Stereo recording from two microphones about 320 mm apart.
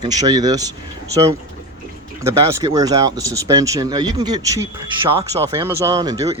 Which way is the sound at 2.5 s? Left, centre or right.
Centre.